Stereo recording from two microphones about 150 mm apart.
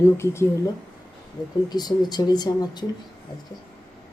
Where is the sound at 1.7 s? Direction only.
25° left (ahead or behind).